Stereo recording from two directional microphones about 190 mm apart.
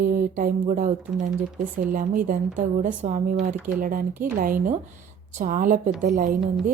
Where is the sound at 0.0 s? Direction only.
45° right (ahead or behind).